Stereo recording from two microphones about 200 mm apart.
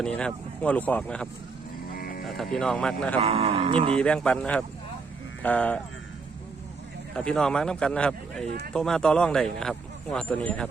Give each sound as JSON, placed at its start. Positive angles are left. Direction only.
{"t": 0.0, "sound": "speech", "side_deg": 5}
{"t": 2.0, "sound": "sheep", "side_deg": 45}
{"t": 2.2, "sound": "speech", "side_deg": 0}
{"t": 3.2, "sound": "speech", "side_deg": -30}
{"t": 3.9, "sound": "speech", "side_deg": 5}
{"t": 7.1, "sound": "speech", "side_deg": 5}